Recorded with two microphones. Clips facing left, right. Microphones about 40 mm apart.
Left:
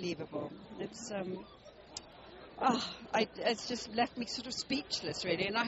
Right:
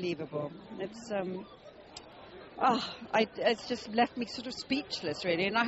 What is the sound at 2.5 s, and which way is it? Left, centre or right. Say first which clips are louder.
Speech: right 3 dB; centre.